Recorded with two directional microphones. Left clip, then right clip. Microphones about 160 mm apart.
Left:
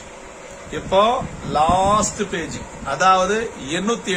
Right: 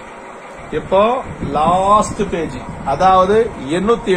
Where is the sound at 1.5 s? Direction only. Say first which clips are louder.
Right 2 dB; 15° left (ahead or behind).